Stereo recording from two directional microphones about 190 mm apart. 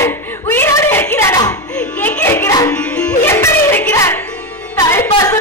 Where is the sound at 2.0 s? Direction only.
10° left (ahead or behind).